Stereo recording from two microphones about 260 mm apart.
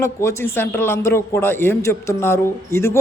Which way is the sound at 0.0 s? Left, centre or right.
Centre.